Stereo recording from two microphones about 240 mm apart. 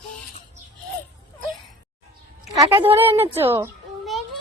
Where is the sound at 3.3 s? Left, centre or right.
Centre.